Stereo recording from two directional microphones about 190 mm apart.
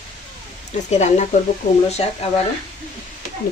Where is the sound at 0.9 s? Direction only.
40° left (ahead or behind).